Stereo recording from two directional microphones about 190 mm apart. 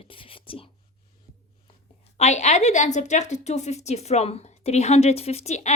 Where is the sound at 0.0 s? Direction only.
30° left (ahead or behind).